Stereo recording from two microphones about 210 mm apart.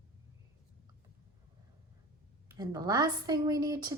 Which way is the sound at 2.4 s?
15° right (ahead or behind).